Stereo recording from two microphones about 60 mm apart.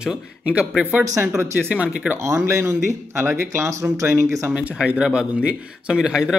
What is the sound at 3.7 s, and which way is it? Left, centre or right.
Speech, right.